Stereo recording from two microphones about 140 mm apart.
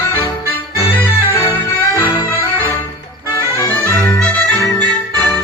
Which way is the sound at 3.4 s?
20° left (ahead or behind).